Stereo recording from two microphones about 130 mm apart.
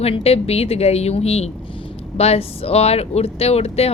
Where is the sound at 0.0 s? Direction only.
50° left (ahead or behind).